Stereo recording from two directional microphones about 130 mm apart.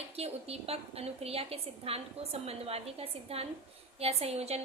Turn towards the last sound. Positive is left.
turn(degrees=-55)  # may be behind; listen again after turning